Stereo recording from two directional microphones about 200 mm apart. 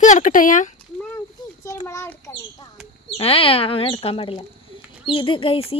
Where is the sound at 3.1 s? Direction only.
30° left (ahead or behind).